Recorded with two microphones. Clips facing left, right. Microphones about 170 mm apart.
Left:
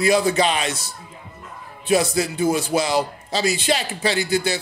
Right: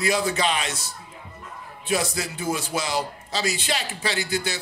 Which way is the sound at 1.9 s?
30° left (ahead or behind).